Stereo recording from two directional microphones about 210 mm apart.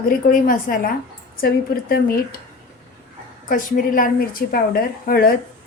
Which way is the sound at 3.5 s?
40° left (ahead or behind).